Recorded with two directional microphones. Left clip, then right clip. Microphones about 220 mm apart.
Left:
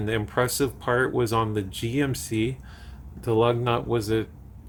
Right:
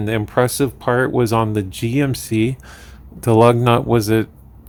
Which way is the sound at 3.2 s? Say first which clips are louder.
Right 10 dB; 40° right (ahead or behind).